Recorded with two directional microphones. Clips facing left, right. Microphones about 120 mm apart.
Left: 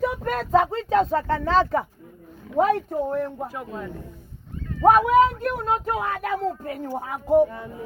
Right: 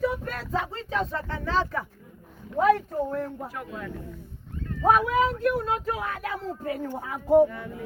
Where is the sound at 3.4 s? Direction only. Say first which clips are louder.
Left 4 dB; 20° left (ahead or behind).